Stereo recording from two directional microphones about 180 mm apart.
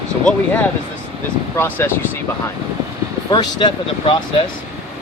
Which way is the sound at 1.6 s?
10° left (ahead or behind).